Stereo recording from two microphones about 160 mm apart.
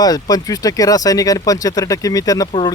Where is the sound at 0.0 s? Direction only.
25° left (ahead or behind).